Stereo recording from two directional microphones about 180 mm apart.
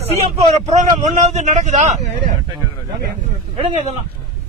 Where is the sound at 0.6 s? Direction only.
40° right (ahead or behind).